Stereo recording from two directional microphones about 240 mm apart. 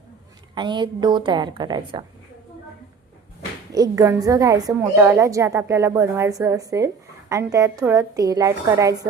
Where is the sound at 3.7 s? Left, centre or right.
Centre.